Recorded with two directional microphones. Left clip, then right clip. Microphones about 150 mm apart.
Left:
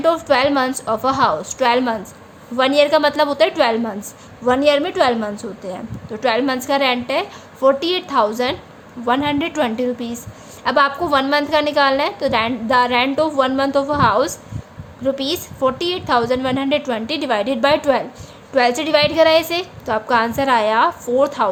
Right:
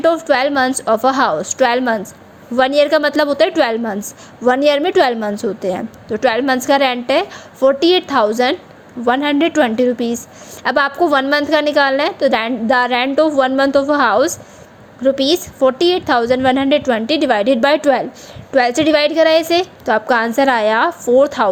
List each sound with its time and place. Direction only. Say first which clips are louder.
0.0 s a woman's voice: right 2 dB; 25° right (ahead or behind)